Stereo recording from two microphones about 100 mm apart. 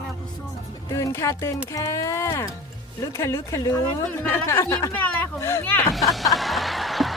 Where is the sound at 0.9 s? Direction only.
30° left (ahead or behind).